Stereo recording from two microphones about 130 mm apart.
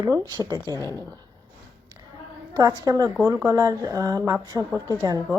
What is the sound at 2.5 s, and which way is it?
Speech, 30° right (ahead or behind).